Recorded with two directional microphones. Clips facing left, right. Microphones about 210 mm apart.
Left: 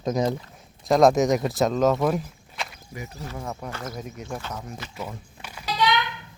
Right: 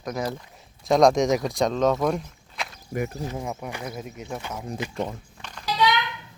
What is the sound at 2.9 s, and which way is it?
Speech, 45° right (ahead or behind).